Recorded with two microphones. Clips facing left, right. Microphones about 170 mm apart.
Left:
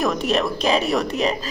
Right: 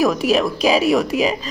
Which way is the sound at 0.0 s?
Centre (ahead or behind).